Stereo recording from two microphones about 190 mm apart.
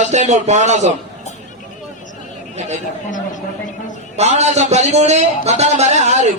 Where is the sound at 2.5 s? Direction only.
35° right (ahead or behind).